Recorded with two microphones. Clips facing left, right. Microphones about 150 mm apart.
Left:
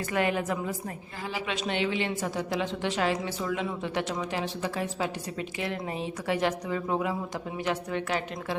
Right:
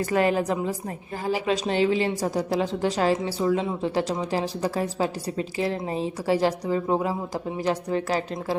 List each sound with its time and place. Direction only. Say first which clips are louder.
0.1 s a woman's voice: right 4 dB; 35° right (ahead or behind)